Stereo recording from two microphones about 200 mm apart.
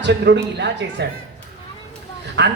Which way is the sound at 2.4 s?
60° right (ahead or behind).